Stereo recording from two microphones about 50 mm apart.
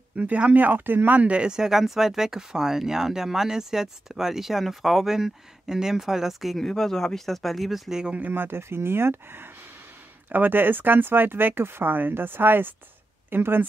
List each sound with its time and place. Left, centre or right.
0.1 s speech: right
1.3 s speech: centre
6.6 s speech: centre
8.2 s speech: right